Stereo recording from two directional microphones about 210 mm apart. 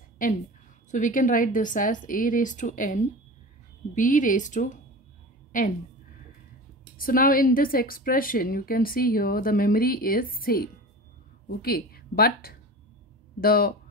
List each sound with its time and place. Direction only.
0.2 s a woman's voice: 40° left (ahead or behind)
7.0 s a woman's voice: 40° left (ahead or behind)